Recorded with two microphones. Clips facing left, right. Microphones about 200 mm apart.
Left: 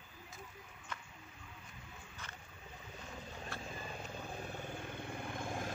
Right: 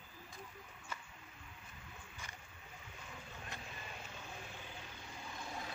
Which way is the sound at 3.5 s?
20° right (ahead or behind).